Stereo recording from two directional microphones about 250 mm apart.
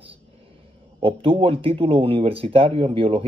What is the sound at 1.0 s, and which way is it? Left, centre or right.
Speech, right.